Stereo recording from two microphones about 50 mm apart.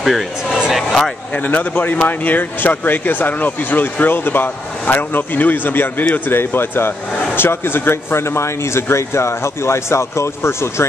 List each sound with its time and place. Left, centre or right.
0.0 s speech: centre
1.3 s speech: left